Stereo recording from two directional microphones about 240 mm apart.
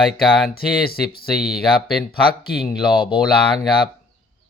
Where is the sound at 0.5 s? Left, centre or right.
Left.